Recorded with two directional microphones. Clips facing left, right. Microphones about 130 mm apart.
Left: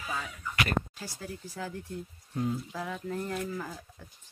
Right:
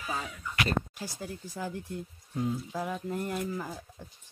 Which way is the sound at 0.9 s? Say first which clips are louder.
Right 2 dB; 15° right (ahead or behind).